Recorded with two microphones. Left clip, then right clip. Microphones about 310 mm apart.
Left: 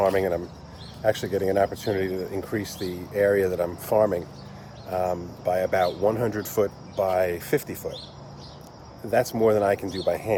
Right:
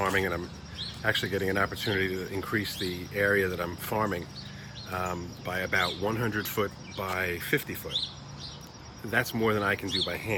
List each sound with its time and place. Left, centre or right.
0.1 s speech: centre
5.5 s speech: centre
9.0 s speech: centre